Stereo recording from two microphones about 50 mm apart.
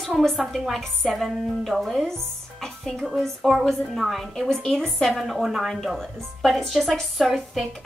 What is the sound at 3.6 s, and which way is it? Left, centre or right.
A woman's voice, centre.